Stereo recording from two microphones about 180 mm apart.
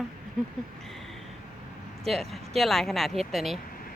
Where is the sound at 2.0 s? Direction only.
Centre (ahead or behind).